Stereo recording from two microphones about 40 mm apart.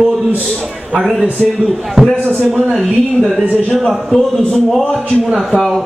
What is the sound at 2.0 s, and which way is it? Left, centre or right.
Speech, right.